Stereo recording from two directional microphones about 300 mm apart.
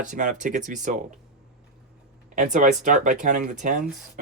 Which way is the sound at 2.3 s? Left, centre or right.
Right.